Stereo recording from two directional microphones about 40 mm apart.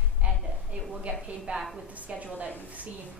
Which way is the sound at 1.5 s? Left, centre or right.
Right.